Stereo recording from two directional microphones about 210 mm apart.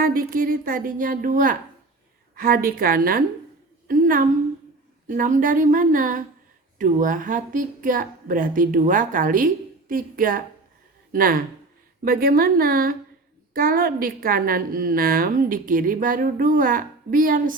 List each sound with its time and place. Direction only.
0.0 s a woman's voice: 45° right (ahead or behind)